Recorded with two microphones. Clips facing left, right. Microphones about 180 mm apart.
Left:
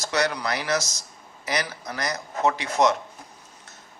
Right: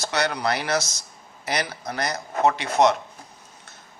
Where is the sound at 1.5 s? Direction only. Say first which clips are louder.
Right 1 dB; 30° right (ahead or behind).